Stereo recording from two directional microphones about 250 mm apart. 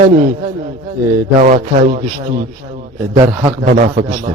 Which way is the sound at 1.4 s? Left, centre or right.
Right.